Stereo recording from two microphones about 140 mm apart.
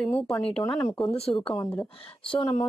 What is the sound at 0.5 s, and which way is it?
Speech, 40° left (ahead or behind).